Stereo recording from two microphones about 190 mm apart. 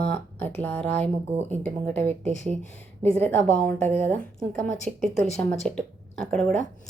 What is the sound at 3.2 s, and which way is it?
A woman's voice, 10° left (ahead or behind).